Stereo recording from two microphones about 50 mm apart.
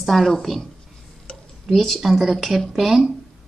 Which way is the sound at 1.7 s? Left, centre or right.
Centre.